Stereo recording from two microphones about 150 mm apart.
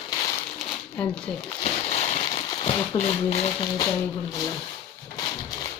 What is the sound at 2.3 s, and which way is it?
Speech, 30° left (ahead or behind).